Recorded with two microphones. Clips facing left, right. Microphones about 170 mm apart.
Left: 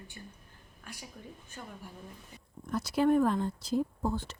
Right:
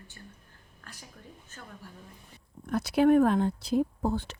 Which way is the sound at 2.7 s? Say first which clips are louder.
Right 4 dB; 65° right (ahead or behind).